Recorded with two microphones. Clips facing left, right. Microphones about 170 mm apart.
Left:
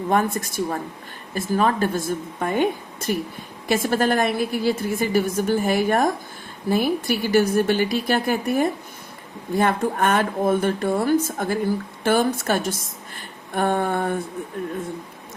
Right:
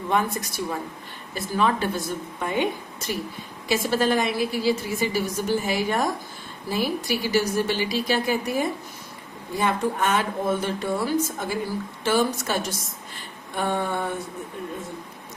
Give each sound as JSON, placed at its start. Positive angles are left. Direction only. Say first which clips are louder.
{"t": 0.1, "sound": "a woman's voice", "louder": "left 3 dB", "side_deg": 50}